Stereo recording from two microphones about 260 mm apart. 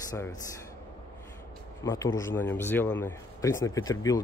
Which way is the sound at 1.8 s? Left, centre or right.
Centre.